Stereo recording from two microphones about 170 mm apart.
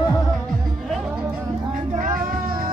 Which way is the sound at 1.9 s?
50° right (ahead or behind).